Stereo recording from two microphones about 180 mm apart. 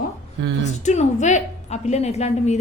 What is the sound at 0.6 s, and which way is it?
A woman's voice, 40° left (ahead or behind).